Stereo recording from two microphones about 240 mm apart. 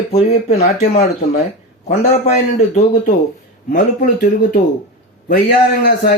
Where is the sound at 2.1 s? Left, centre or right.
Left.